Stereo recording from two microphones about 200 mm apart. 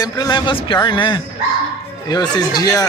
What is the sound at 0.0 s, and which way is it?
A man's voice, 20° left (ahead or behind).